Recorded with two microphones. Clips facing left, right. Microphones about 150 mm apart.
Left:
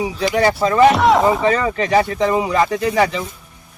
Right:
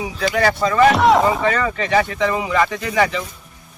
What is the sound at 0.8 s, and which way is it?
Speech, centre (ahead or behind).